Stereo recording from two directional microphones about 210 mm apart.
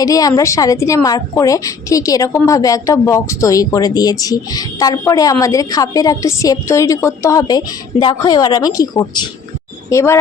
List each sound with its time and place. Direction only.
0.0 s a woman's voice: 15° left (ahead or behind)